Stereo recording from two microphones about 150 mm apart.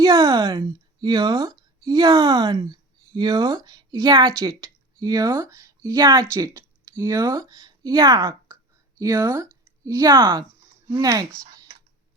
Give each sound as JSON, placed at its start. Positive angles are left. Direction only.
{"t": 0.0, "sound": "speech", "side_deg": -25}